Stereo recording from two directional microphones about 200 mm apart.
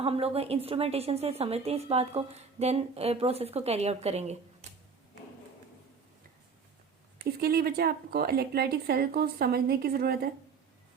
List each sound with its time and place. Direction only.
0.0 s a woman's voice: 30° right (ahead or behind)
4.6 s a sound: 35° right (ahead or behind)
7.3 s a woman's voice: 50° right (ahead or behind)